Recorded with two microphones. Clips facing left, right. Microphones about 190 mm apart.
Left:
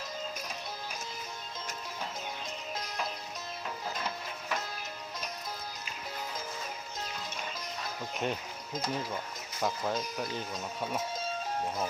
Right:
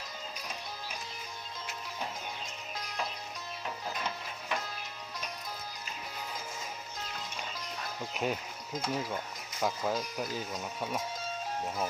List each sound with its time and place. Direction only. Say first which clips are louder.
8.1 s speech: right 1 dB; 5° right (ahead or behind)